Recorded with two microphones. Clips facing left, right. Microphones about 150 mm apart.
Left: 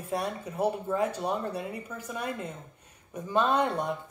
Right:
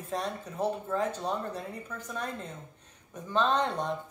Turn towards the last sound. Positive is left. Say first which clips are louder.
# left 2 dB
turn(degrees=10)  # may be behind; listen again after turning